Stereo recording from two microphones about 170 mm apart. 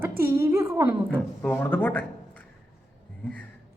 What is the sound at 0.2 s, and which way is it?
Speech, 15° right (ahead or behind).